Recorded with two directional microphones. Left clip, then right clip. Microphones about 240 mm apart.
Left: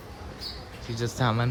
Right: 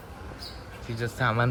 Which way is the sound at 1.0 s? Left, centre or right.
Centre.